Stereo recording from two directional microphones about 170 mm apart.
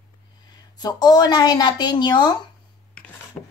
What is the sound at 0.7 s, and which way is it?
A woman's voice, 25° left (ahead or behind).